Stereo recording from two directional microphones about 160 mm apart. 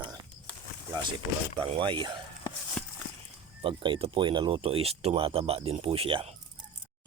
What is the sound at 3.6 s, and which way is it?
Speech, 30° right (ahead or behind).